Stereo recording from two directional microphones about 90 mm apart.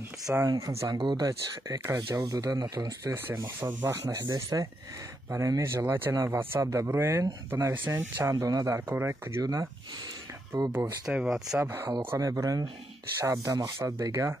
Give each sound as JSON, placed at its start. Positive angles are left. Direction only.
{"t": 0.3, "sound": "speech", "side_deg": -35}
{"t": 0.9, "sound": "speech", "side_deg": -60}
{"t": 1.2, "sound": "speech", "side_deg": -40}
{"t": 3.1, "sound": "speech", "side_deg": -35}
{"t": 7.7, "sound": "speech", "side_deg": -25}
{"t": 9.4, "sound": "speech", "side_deg": -40}
{"t": 11.1, "sound": "speech", "side_deg": -5}
{"t": 11.6, "sound": "speech", "side_deg": -25}
{"t": 12.2, "sound": "speech", "side_deg": -40}